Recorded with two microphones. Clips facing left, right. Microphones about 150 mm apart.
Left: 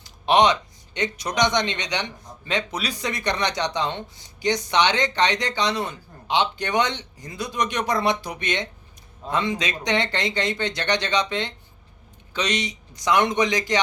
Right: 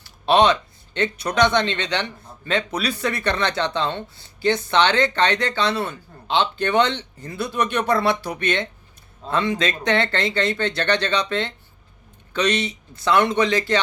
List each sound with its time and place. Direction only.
0.0 s speech: 15° left (ahead or behind)